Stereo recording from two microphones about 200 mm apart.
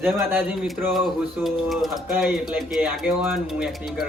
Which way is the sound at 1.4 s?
Centre (ahead or behind).